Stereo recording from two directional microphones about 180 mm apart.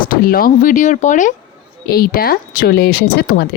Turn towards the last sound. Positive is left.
turn(degrees=60)  # may be behind; listen again after turning